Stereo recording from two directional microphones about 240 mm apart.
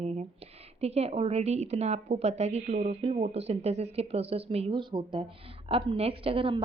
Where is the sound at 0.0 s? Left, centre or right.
Right.